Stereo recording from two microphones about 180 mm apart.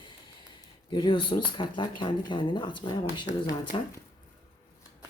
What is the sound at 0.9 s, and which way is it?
Speech, 25° left (ahead or behind).